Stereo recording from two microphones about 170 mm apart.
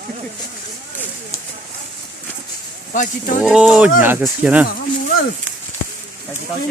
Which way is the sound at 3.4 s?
5° right (ahead or behind).